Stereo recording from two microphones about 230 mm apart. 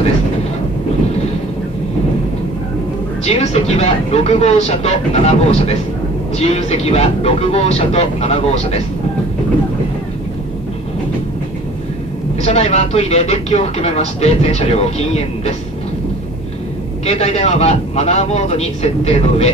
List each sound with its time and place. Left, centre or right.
3.3 s speech: left
12.4 s speech: left
17.0 s speech: left